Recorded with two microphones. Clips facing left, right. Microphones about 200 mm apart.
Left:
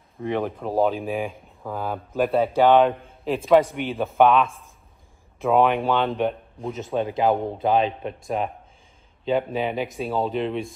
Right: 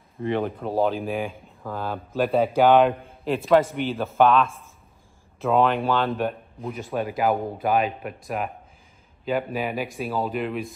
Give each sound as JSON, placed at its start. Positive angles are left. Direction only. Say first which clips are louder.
{"t": 0.2, "sound": "a man's voice", "louder": "even", "side_deg": 0}
{"t": 7.0, "sound": "speech", "louder": "left 2 dB", "side_deg": 25}
{"t": 9.5, "sound": "speech", "louder": "left 2 dB", "side_deg": 25}